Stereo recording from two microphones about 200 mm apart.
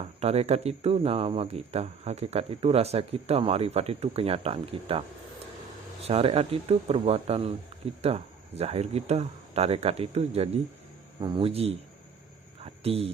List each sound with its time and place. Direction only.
0.2 s speech: 30° right (ahead or behind)
6.1 s speech: 30° right (ahead or behind)
12.6 s a sound: 30° right (ahead or behind)